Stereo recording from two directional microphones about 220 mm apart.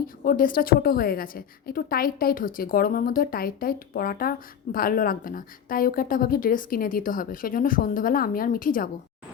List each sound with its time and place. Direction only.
0.3 s a woman's voice: 40° left (ahead or behind)